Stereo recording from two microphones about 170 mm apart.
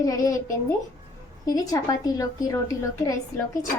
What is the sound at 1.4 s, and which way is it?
A woman's voice, 20° left (ahead or behind).